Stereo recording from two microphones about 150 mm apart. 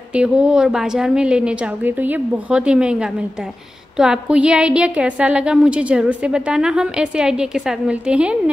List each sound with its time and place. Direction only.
0.1 s a woman's voice: 5° right (ahead or behind)